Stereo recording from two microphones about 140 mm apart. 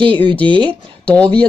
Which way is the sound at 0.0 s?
35° right (ahead or behind).